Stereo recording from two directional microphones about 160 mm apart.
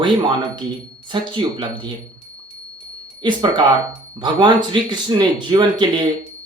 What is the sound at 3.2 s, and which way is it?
Speech, 30° right (ahead or behind).